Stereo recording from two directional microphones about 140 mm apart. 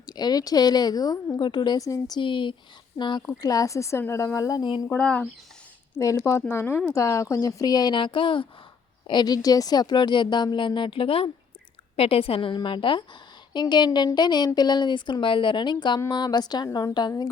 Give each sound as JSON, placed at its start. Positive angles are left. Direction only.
{"t": 0.0, "sound": "a woman's voice", "side_deg": 30}
{"t": 4.9, "sound": "speech", "side_deg": 5}
{"t": 6.0, "sound": "a woman's voice", "side_deg": 20}